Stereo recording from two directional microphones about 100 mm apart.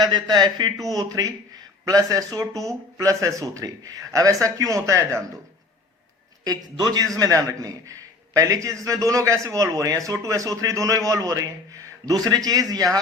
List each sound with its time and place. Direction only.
0.0 s a man's voice: 45° right (ahead or behind); by 5.2 s 25° right (ahead or behind)
6.4 s a man's voice: 40° right (ahead or behind)